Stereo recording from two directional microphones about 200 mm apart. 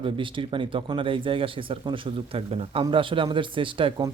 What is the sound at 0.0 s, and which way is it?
Speech, 25° right (ahead or behind).